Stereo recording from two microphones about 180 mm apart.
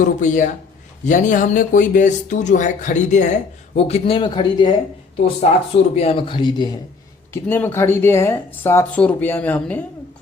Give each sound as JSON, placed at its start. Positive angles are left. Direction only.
{"t": 0.0, "sound": "speech", "side_deg": 45}
{"t": 5.5, "sound": "speech", "side_deg": 35}
{"t": 7.4, "sound": "speech", "side_deg": 10}